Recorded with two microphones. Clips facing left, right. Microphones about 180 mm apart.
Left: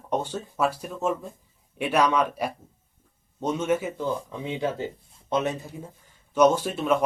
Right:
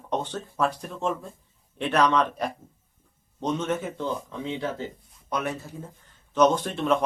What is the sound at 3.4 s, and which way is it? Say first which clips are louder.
Speech: left 2 dB; 10° left (ahead or behind).